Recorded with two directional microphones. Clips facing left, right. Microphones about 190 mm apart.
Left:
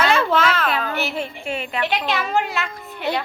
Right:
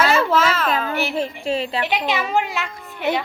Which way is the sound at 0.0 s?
5° right (ahead or behind).